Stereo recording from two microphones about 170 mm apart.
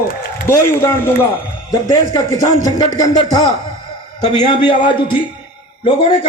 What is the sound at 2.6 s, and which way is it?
Speech, 25° left (ahead or behind).